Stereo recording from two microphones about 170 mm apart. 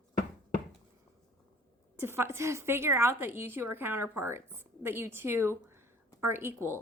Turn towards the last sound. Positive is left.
turn(degrees=-15)  # may be behind; listen again after turning